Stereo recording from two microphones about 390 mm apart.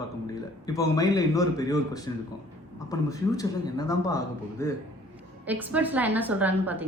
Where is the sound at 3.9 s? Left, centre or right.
Centre.